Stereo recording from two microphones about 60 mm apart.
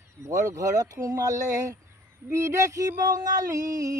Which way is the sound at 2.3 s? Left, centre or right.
Right.